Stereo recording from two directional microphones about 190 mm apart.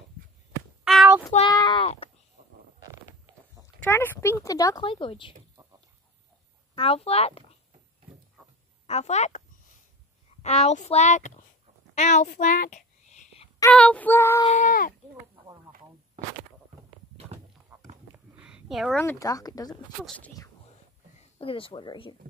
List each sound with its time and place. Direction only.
0.8 s child singing: centre (ahead or behind)
1.5 s a sound: 25° left (ahead or behind)
2.4 s a sound: 45° right (ahead or behind)
3.6 s speech: 10° left (ahead or behind)
6.7 s speech: 30° left (ahead or behind)
8.8 s speech: 35° left (ahead or behind)
10.4 s a child's voice: 35° left (ahead or behind)
11.9 s a sound: 40° left (ahead or behind)
13.7 s female singing: 5° left (ahead or behind)
14.4 s speech: 40° left (ahead or behind)
17.7 s a sound: 5° right (ahead or behind)
19.0 s speech: 20° left (ahead or behind)
20.0 s speech: centre (ahead or behind)
21.2 s speech: 30° left (ahead or behind)